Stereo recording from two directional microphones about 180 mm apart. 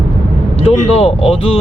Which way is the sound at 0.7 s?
35° left (ahead or behind).